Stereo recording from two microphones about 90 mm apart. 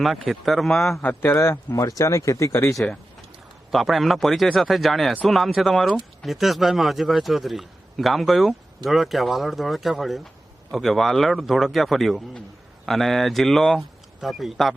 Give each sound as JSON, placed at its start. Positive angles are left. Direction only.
{"t": 0.0, "sound": "a man's voice", "side_deg": 0}
{"t": 1.0, "sound": "speech", "side_deg": 25}
{"t": 3.7, "sound": "a man's voice", "side_deg": 0}